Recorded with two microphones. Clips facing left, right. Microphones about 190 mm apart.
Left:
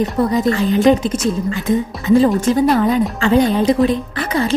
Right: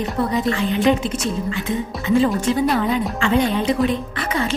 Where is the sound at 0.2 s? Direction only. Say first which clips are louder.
Left 3 dB; 40° left (ahead or behind).